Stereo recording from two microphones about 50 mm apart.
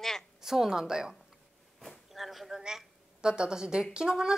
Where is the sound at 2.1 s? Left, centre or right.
Centre.